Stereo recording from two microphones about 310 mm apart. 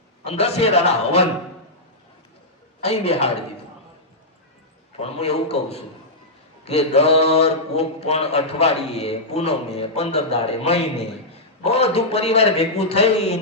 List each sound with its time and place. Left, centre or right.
0.3 s speech: centre
2.8 s speech: centre
4.9 s speech: centre